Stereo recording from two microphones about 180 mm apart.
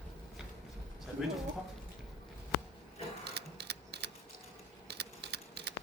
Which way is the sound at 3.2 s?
65° right (ahead or behind).